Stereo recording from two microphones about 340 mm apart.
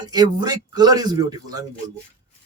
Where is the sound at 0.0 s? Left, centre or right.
Centre.